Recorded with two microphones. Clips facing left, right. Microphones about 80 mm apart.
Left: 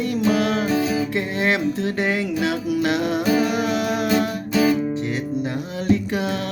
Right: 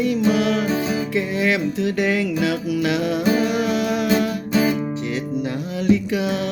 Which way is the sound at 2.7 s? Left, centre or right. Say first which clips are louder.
Even; left.